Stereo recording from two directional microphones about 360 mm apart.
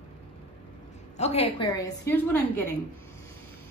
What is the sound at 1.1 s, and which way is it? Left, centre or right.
A woman's voice, centre.